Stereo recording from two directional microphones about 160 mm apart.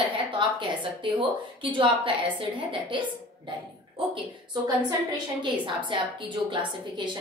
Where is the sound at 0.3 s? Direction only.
30° right (ahead or behind).